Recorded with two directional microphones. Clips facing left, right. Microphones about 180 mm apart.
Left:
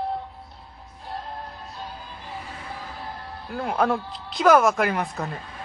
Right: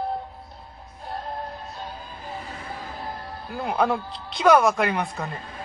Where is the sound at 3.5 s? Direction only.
Centre (ahead or behind).